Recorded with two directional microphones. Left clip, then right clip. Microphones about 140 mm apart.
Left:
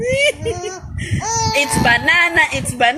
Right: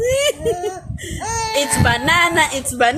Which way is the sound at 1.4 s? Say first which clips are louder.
Left 2 dB; 20° right (ahead or behind).